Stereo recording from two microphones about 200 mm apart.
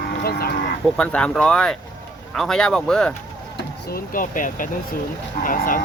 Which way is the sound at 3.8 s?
45° left (ahead or behind).